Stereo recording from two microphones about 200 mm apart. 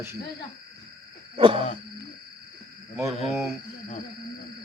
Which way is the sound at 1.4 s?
25° right (ahead or behind).